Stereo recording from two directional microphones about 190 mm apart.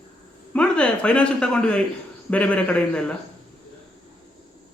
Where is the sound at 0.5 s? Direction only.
5° left (ahead or behind).